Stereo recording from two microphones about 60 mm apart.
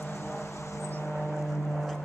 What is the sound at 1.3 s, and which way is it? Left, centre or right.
Vehicle, centre.